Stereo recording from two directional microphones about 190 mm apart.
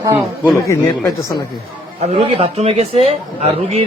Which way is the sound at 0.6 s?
20° left (ahead or behind).